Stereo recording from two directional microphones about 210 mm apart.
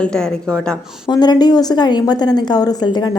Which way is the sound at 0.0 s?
5° left (ahead or behind).